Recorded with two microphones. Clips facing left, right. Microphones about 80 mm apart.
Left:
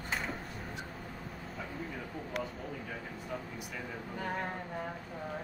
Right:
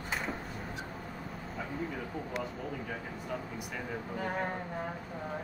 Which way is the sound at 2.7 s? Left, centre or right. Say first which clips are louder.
Right 3 dB; centre.